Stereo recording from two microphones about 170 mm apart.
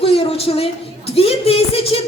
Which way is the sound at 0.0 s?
35° left (ahead or behind).